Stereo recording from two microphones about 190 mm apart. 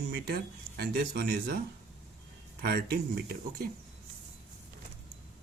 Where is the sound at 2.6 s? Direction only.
55° right (ahead or behind).